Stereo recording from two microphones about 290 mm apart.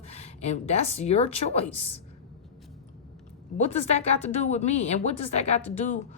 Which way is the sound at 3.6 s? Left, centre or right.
Left.